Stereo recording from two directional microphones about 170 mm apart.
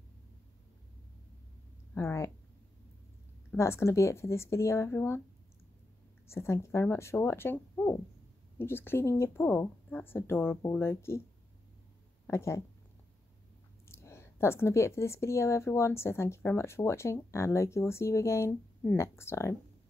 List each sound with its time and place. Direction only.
2.0 s speech: 15° left (ahead or behind)
3.5 s speech: 15° left (ahead or behind)
6.2 s speech: 15° left (ahead or behind)
12.3 s speech: 15° left (ahead or behind)
13.8 s speech: 15° left (ahead or behind)